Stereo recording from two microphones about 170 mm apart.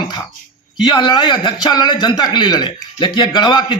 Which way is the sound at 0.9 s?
25° left (ahead or behind).